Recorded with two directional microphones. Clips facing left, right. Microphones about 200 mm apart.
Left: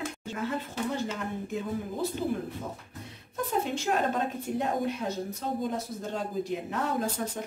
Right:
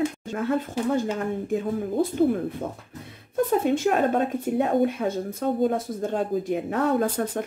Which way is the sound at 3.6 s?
55° right (ahead or behind).